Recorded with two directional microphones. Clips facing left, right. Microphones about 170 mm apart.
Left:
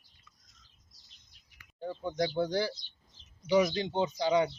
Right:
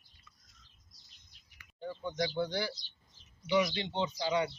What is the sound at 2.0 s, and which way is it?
Speech, 40° left (ahead or behind).